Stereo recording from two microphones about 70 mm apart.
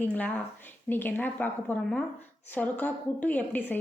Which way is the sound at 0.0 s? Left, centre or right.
Left.